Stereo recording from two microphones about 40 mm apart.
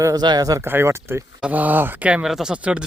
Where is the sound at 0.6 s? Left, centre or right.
Right.